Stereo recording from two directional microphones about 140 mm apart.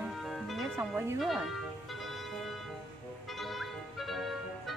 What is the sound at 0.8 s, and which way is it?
Speech, 15° right (ahead or behind).